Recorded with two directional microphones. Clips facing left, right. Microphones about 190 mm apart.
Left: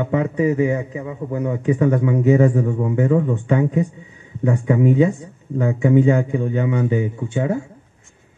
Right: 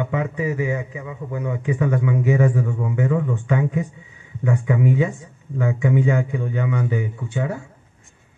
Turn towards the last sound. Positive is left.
turn(degrees=25)  # may be behind; listen again after turning